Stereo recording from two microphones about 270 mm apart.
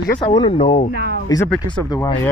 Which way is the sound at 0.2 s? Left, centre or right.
Centre.